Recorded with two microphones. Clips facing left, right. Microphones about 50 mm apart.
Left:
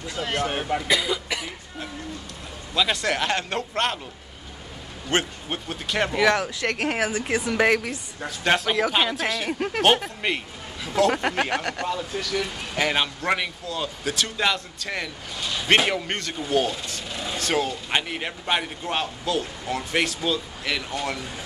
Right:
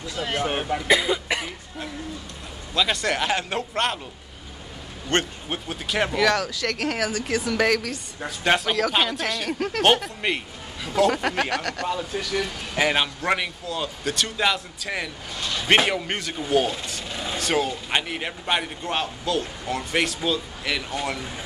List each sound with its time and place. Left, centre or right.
0.4 s speech: centre
0.8 s speech: right
2.7 s speech: centre
5.1 s speech: centre
6.1 s a woman's voice: left
8.2 s speech: centre
9.8 s speech: centre
11.5 s speech: centre
11.9 s speech: centre